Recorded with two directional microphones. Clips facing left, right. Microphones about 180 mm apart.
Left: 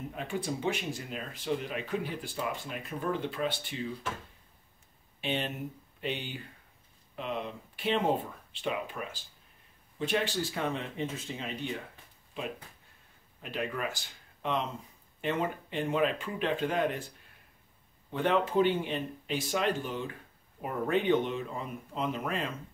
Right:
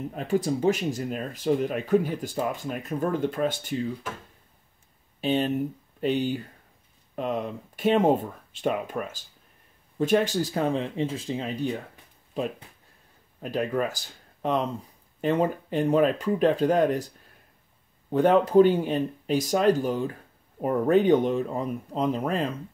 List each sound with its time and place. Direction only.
0.1 s speech: 40° right (ahead or behind)
5.2 s speech: 40° right (ahead or behind)
18.1 s speech: 40° right (ahead or behind)